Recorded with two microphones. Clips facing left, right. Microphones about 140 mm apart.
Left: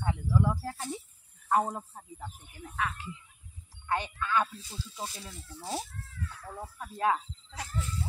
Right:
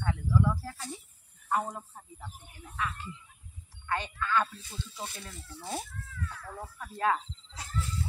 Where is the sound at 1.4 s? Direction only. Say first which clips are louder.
Left 4 dB; 65° left (ahead or behind).